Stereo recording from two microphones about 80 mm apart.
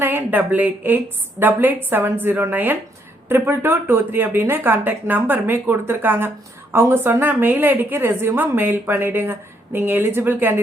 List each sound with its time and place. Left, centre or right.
0.0 s speech: right